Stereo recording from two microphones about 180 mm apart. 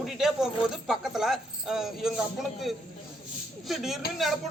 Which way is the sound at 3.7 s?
Centre (ahead or behind).